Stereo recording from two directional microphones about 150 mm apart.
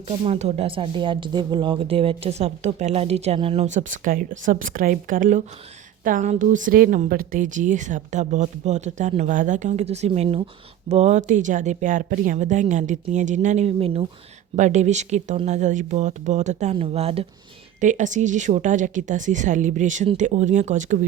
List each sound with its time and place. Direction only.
0.3 s a woman's voice: 45° right (ahead or behind)
14.5 s speech: 50° right (ahead or behind)
16.7 s speech: 40° right (ahead or behind)
17.7 s a woman's voice: 55° right (ahead or behind)